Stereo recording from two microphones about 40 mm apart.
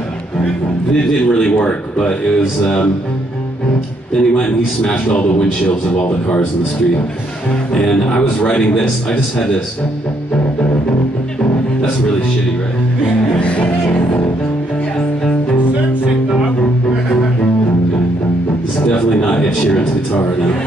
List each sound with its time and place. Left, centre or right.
0.9 s a man's voice: left
4.2 s a man's voice: left
7.7 s a man's voice: left
13.4 s music: left
18.9 s a sound: left